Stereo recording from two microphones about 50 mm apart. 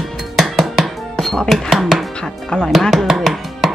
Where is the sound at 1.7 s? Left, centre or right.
Centre.